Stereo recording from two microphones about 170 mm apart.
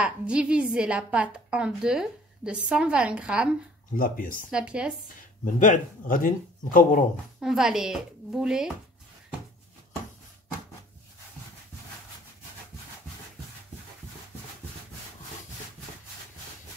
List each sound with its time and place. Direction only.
0.0 s a woman's voice: 5° right (ahead or behind)
3.9 s speech: 55° left (ahead or behind)
4.5 s a woman's voice: 5° right (ahead or behind)
5.4 s speech: 50° left (ahead or behind)
7.3 s a woman's voice: 5° right (ahead or behind)